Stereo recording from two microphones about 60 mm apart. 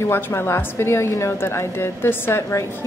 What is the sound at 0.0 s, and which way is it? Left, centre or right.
A woman's voice, left.